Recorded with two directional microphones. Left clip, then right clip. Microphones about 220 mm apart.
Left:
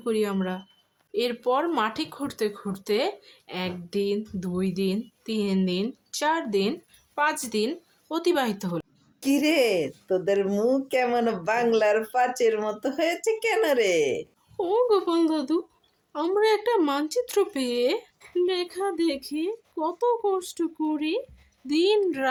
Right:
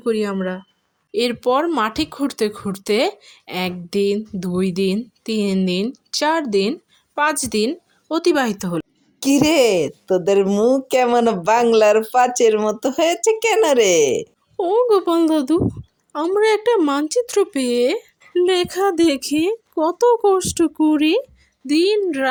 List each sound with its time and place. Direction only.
0.0 s a woman's voice: 25° right (ahead or behind)
14.5 s speech: 20° right (ahead or behind)
21.7 s speech: 20° right (ahead or behind)